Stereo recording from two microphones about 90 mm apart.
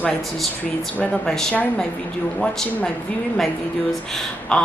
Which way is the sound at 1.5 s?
15° left (ahead or behind).